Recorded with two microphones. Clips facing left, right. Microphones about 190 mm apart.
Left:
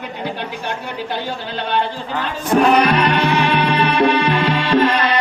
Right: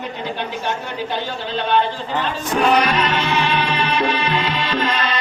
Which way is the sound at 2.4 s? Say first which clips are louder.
Left 4 dB; 60° left (ahead or behind).